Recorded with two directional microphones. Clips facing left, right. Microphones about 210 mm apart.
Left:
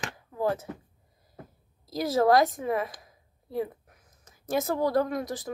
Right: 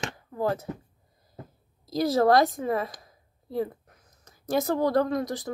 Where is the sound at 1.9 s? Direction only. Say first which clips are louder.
Right 2 dB; 35° right (ahead or behind).